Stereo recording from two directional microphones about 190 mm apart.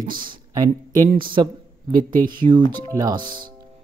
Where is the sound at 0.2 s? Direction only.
20° right (ahead or behind).